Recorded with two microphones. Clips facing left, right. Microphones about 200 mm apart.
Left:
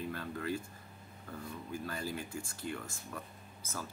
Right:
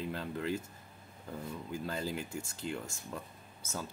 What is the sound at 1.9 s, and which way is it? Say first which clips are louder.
Speech: right 4 dB; 20° right (ahead or behind).